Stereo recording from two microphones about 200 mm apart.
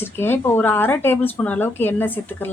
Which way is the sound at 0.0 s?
10° left (ahead or behind).